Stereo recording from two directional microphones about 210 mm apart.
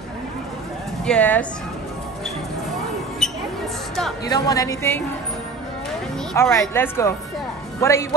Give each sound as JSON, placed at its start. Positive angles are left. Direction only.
{"t": 1.0, "sound": "speech", "side_deg": 5}
{"t": 3.2, "sound": "a sound", "side_deg": 0}
{"t": 4.3, "sound": "speech", "side_deg": 15}
{"t": 6.3, "sound": "speech", "side_deg": 15}